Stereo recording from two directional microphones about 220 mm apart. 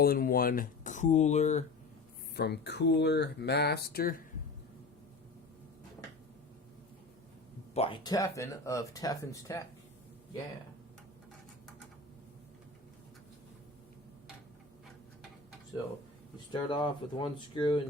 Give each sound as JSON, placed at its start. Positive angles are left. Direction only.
{"t": 0.0, "sound": "speech", "side_deg": 40}
{"t": 2.3, "sound": "speech", "side_deg": 50}
{"t": 7.7, "sound": "speech", "side_deg": 25}
{"t": 16.5, "sound": "speech", "side_deg": 20}